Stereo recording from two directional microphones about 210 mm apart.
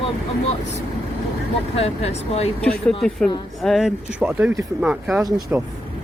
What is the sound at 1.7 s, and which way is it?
Speech, 30° left (ahead or behind).